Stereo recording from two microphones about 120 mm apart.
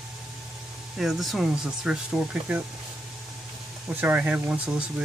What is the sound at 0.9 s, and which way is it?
Speech, centre (ahead or behind).